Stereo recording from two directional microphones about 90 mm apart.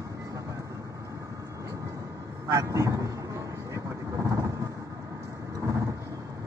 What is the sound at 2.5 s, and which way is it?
Honk, 35° right (ahead or behind).